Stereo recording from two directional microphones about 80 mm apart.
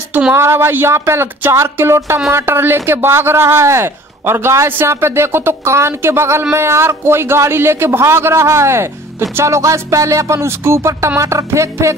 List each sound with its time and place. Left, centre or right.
0.3 s speech: right